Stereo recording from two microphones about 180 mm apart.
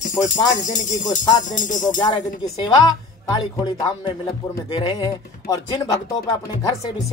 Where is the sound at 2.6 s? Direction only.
20° left (ahead or behind).